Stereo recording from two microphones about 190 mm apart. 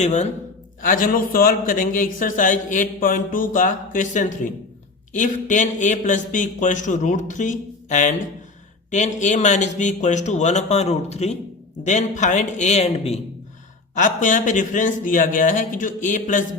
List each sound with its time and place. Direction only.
0.0 s a man's voice: 40° left (ahead or behind)